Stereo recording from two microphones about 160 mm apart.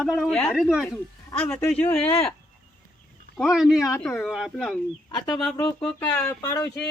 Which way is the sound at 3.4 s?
Centre (ahead or behind).